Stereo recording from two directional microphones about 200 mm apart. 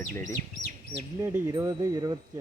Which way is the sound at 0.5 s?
65° right (ahead or behind).